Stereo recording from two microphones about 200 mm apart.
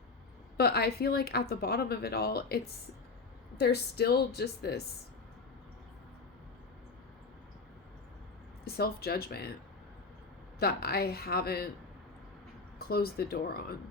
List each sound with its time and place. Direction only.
0.5 s speech: 50° left (ahead or behind)
3.6 s speech: 55° left (ahead or behind)
8.6 s speech: 50° left (ahead or behind)
10.6 s speech: 50° left (ahead or behind)
12.9 s speech: 50° left (ahead or behind)